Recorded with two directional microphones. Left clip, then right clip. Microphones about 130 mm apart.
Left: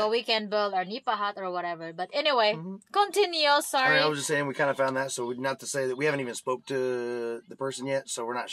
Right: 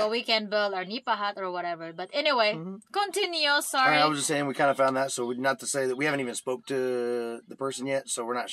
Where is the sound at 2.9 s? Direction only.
40° left (ahead or behind).